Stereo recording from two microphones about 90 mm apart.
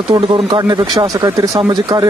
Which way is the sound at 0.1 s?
55° right (ahead or behind).